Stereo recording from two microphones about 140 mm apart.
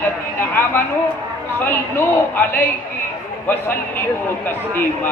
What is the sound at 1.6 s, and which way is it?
A man's voice, 15° left (ahead or behind).